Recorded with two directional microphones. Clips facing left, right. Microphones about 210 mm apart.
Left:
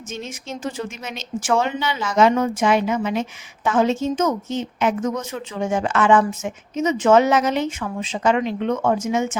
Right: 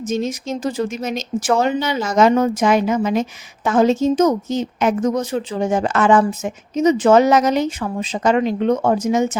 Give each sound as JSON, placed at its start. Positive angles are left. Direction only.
{"t": 0.1, "sound": "speech", "side_deg": -40}